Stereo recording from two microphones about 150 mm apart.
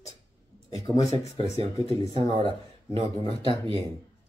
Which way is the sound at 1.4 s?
40° right (ahead or behind).